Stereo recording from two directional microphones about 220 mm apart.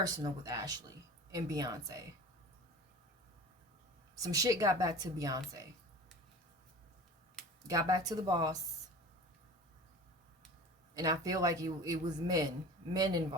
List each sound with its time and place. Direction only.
0.0 s a man's voice: 15° right (ahead or behind)
4.2 s a man's voice: 15° right (ahead or behind)
7.7 s a man's voice: 15° right (ahead or behind)
10.9 s a man's voice: 15° right (ahead or behind)